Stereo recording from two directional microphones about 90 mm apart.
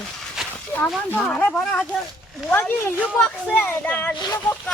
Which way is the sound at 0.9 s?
15° left (ahead or behind).